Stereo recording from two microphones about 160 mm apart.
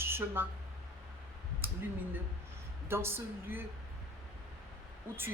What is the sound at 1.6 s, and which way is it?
Speech, 10° right (ahead or behind).